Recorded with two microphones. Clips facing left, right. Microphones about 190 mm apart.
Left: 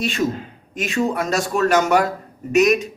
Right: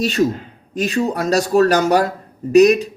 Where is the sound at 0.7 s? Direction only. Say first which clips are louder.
Right 2 dB; 35° right (ahead or behind).